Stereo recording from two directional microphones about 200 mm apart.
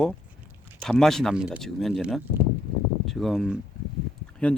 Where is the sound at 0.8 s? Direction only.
Centre (ahead or behind).